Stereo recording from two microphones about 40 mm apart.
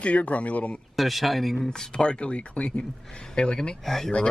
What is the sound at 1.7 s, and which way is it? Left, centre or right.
Speech, left.